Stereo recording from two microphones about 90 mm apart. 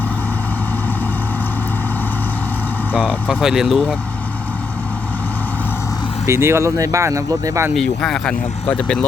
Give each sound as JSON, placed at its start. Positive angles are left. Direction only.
{"t": 3.0, "sound": "speech", "side_deg": -10}
{"t": 6.2, "sound": "speech", "side_deg": -30}
{"t": 7.8, "sound": "speech", "side_deg": 5}